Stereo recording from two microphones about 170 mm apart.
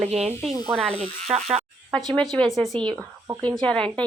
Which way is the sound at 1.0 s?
40° right (ahead or behind).